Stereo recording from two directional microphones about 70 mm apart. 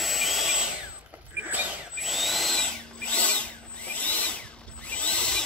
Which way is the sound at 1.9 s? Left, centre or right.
Centre.